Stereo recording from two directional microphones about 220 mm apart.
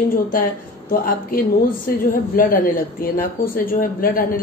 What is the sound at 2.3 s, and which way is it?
A woman's voice, 40° left (ahead or behind).